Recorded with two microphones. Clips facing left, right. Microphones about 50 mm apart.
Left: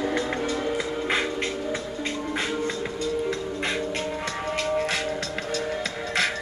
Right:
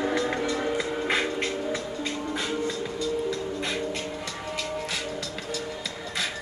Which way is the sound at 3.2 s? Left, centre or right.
Left.